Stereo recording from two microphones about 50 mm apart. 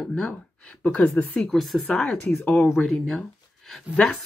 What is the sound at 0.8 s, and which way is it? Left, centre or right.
Speech, left.